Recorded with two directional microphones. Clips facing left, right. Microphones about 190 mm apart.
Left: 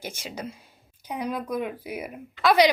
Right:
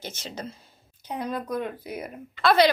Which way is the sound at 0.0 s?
10° left (ahead or behind).